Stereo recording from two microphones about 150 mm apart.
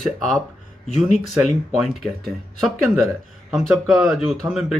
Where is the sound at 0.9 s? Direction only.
50° left (ahead or behind).